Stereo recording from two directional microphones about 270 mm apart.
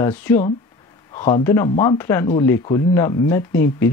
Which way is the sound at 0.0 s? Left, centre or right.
Centre.